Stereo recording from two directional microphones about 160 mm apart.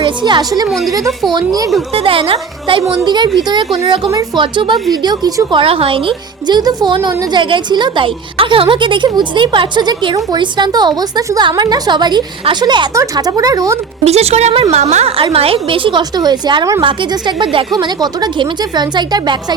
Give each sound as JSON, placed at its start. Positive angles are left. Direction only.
{"t": 0.0, "sound": "a woman's voice", "side_deg": -30}
{"t": 1.9, "sound": "a woman's voice", "side_deg": -35}
{"t": 14.0, "sound": "a woman's voice", "side_deg": -40}